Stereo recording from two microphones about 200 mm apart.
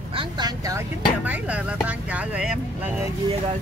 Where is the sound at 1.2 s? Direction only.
5° right (ahead or behind).